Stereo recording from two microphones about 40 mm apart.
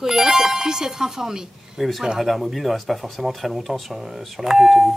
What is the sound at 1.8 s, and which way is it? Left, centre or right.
Speech, centre.